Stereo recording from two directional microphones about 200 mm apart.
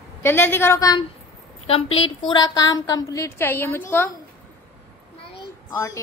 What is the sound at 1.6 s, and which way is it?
A woman's voice, 30° left (ahead or behind).